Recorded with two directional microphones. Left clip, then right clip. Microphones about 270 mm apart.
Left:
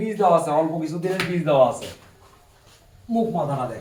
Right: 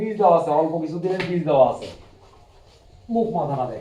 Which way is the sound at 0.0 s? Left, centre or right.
Left.